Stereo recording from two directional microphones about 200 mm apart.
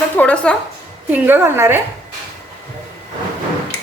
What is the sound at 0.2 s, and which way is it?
Speech, 5° left (ahead or behind).